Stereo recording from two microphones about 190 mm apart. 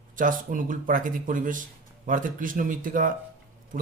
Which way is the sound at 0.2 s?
45° right (ahead or behind).